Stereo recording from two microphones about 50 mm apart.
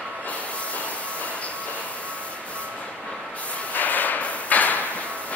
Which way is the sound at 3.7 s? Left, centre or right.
Left.